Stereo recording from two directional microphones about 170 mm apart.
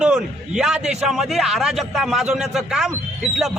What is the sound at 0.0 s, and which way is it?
Speech, 5° right (ahead or behind).